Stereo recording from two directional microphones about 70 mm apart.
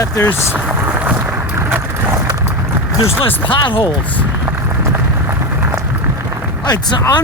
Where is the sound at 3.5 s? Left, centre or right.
Left.